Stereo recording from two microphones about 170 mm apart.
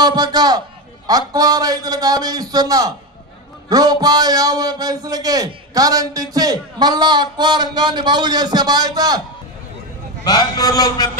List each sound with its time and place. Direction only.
0.0 s a man's voice: 25° right (ahead or behind)
10.2 s a man's voice: 25° left (ahead or behind)